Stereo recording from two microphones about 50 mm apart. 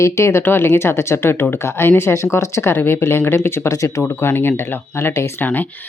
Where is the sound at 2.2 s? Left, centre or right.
Left.